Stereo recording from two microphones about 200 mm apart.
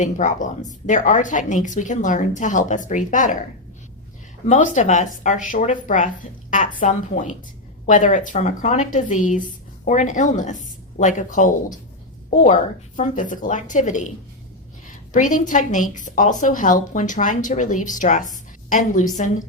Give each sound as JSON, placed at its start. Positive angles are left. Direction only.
{"t": 0.0, "sound": "speech", "side_deg": 40}
{"t": 4.4, "sound": "a woman's voice", "side_deg": 35}
{"t": 13.0, "sound": "speech", "side_deg": 40}
{"t": 15.1, "sound": "speech", "side_deg": 40}